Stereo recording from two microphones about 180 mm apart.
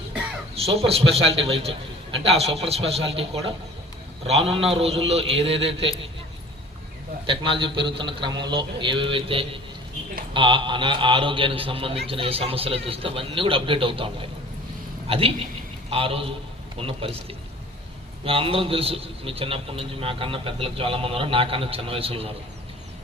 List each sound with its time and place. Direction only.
0.5 s a man's voice: 35° right (ahead or behind)
7.3 s a man's voice: 30° right (ahead or behind)